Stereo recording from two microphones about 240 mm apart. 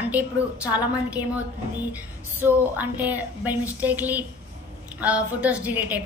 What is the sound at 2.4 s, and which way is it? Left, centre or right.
A woman's voice, centre.